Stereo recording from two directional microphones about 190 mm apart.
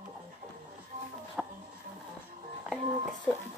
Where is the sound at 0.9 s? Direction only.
35° right (ahead or behind).